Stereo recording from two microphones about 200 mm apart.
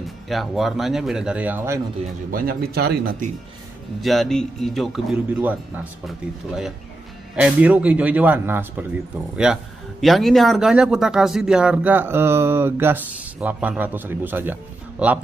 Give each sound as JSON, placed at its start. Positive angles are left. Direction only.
{"t": 0.3, "sound": "speech", "side_deg": 0}
{"t": 2.3, "sound": "speech", "side_deg": -50}
{"t": 4.0, "sound": "speech", "side_deg": 0}